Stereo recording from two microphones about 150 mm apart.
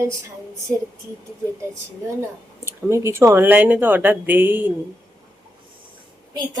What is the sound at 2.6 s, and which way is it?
Speech, 15° right (ahead or behind).